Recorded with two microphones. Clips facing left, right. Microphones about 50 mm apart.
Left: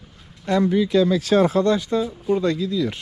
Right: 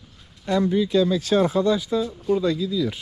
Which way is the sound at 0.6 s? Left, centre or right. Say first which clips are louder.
Left 2 dB; left.